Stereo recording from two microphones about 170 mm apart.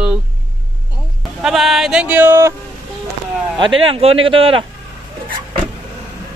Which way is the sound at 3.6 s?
30° right (ahead or behind).